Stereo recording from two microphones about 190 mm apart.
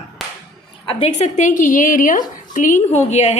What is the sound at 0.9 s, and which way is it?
A woman's voice, 35° left (ahead or behind).